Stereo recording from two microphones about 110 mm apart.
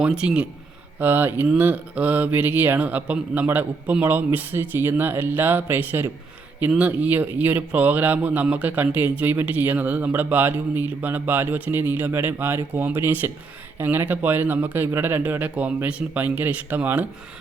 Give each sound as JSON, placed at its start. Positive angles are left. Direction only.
{"t": 0.0, "sound": "speech", "side_deg": -10}